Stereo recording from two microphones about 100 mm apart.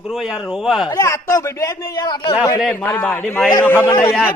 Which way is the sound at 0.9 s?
35° left (ahead or behind).